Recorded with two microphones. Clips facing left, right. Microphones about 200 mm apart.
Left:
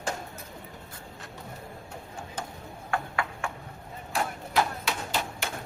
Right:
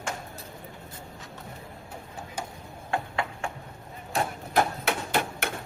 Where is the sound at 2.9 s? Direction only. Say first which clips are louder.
Right 1 dB; 25° right (ahead or behind).